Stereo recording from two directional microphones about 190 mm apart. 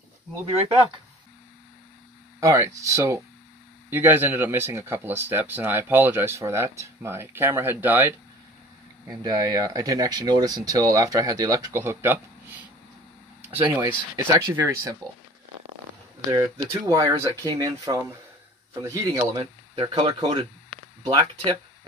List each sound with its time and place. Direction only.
2.4 s speech: 15° right (ahead or behind)
13.5 s speech: 10° right (ahead or behind)
16.9 s speech: 20° right (ahead or behind)